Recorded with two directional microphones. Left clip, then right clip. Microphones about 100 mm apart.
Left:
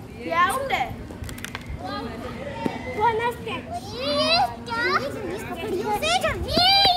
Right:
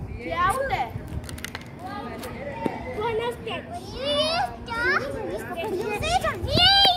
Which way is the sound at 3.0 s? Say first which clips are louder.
Left 5 dB; 30° left (ahead or behind).